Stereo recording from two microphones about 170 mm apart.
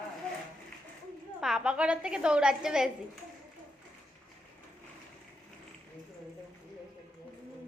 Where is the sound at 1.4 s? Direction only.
5° right (ahead or behind).